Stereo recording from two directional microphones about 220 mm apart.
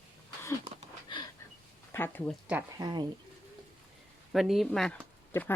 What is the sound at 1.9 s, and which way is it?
Speech, 10° left (ahead or behind).